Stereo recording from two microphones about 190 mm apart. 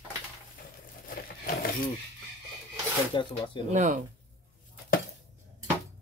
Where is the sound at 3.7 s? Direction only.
40° right (ahead or behind).